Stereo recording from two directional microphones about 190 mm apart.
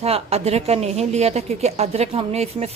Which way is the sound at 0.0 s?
30° right (ahead or behind).